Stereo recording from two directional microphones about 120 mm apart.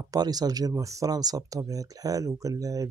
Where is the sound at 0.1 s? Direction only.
35° right (ahead or behind).